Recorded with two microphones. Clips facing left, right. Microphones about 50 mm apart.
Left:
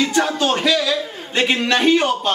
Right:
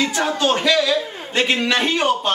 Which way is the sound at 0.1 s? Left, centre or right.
Centre.